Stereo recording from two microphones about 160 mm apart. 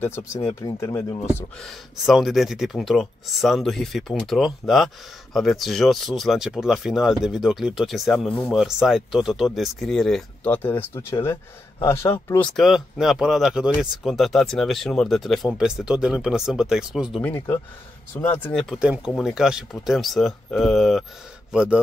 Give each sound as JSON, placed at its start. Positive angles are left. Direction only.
{"t": 0.0, "sound": "speech", "side_deg": 15}
{"t": 1.6, "sound": "speech", "side_deg": 0}
{"t": 12.5, "sound": "speech", "side_deg": 0}
{"t": 17.2, "sound": "speech", "side_deg": 15}
{"t": 18.8, "sound": "speech", "side_deg": -5}